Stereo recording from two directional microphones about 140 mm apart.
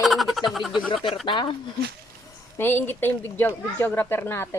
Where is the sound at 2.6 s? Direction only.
15° left (ahead or behind).